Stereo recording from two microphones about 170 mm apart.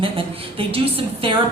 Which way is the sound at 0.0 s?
30° right (ahead or behind).